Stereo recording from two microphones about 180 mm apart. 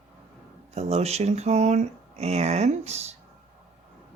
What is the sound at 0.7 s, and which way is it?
Speech, 35° right (ahead or behind).